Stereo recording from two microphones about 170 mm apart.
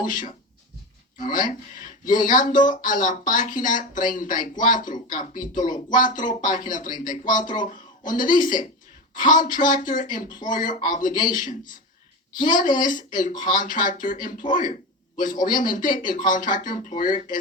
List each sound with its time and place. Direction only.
0.0 s speech: 50° left (ahead or behind)